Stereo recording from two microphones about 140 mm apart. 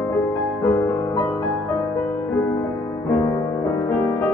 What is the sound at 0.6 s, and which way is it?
Music, 20° left (ahead or behind).